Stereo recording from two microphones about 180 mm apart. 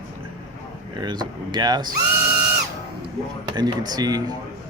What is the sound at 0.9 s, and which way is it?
Speech, 25° right (ahead or behind).